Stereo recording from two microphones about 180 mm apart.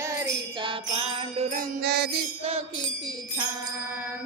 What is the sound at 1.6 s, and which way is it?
Music, 65° right (ahead or behind).